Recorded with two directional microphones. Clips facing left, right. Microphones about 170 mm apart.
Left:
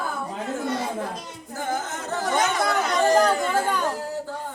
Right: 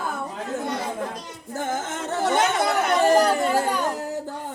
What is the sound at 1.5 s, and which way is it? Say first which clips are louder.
Chatter: right 1 dB; 20° right (ahead or behind).